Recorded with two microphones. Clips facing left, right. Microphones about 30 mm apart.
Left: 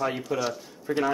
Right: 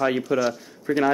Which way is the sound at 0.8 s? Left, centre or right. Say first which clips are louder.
Right 5 dB; centre.